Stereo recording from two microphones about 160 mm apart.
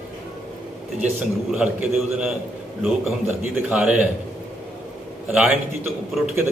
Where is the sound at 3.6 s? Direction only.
5° right (ahead or behind).